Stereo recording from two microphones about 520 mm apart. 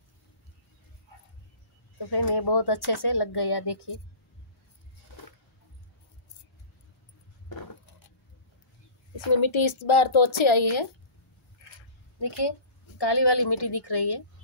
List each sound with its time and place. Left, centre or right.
2.0 s speech: left
9.1 s a woman's voice: left
12.2 s a woman's voice: left